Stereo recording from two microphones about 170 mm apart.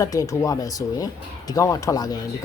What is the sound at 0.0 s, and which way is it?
A man's voice, 20° left (ahead or behind).